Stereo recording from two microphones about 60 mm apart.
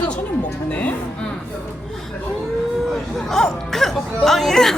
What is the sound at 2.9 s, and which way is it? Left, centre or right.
Speech, centre.